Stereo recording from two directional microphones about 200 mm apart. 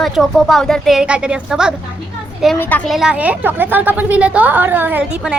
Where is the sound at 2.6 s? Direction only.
10° left (ahead or behind).